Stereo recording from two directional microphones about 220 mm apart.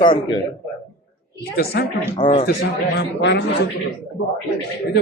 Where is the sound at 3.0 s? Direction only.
50° left (ahead or behind).